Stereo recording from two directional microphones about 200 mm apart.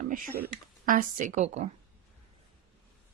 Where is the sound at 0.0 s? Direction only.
40° right (ahead or behind).